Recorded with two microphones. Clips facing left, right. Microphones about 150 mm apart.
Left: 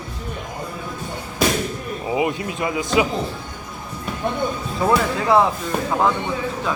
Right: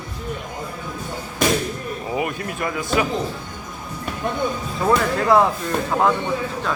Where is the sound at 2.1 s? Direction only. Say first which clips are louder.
Left 4 dB; 20° left (ahead or behind).